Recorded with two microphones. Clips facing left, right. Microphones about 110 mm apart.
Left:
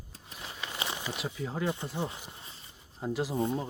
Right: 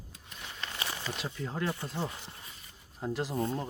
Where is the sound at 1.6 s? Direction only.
15° left (ahead or behind).